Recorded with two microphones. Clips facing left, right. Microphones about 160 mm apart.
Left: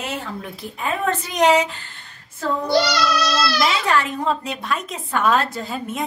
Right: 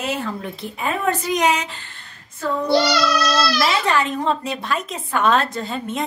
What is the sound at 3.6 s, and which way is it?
A woman's voice, centre (ahead or behind).